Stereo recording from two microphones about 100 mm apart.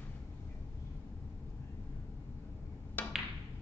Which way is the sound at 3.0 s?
20° left (ahead or behind).